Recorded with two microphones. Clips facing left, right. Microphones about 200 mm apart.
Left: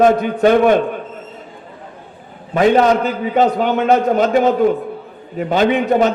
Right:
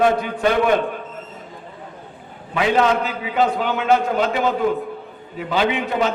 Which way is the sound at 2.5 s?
40° left (ahead or behind).